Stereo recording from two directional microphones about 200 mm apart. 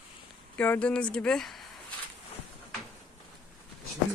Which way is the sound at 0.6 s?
10° left (ahead or behind).